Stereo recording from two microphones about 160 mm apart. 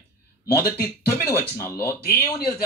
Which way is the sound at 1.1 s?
15° left (ahead or behind).